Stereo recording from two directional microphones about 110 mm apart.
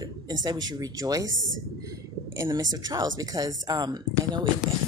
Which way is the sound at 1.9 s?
25° right (ahead or behind).